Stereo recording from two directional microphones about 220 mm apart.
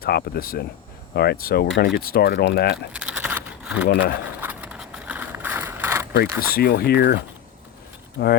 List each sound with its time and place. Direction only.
0.0 s speech: 45° left (ahead or behind)
2.7 s keys jangling: 5° right (ahead or behind)
3.8 s speech: 50° left (ahead or behind)
4.4 s a sound: 5° right (ahead or behind)
6.4 s speech: 45° left (ahead or behind)
8.2 s speech: 50° left (ahead or behind)